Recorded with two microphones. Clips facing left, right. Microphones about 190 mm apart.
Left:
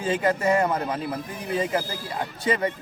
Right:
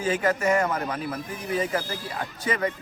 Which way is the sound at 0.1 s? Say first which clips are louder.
Left 1 dB; 30° left (ahead or behind).